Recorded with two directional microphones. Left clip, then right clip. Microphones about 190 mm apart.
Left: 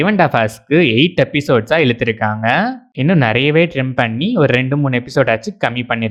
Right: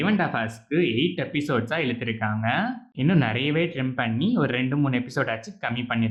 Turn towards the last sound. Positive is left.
turn(degrees=40)  # may be behind; listen again after turning